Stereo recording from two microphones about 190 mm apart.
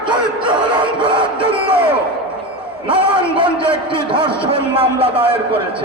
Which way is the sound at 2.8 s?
25° right (ahead or behind).